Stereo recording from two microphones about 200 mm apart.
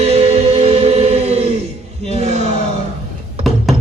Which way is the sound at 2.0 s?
35° right (ahead or behind).